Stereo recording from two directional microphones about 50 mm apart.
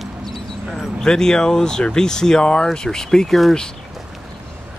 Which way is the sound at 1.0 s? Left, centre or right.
Centre.